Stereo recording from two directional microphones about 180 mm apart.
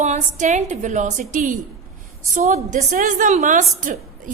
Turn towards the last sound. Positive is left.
turn(degrees=-45)  # may be behind; listen again after turning